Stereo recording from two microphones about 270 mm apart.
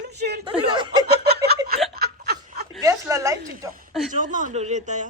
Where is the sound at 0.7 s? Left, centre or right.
Centre.